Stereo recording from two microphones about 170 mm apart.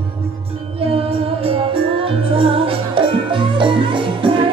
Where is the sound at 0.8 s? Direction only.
35° right (ahead or behind).